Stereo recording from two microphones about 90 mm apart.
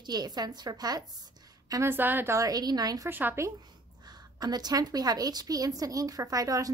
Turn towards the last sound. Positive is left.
turn(degrees=-40)  # may be behind; listen again after turning